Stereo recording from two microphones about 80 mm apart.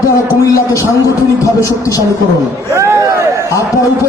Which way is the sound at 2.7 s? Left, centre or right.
Right.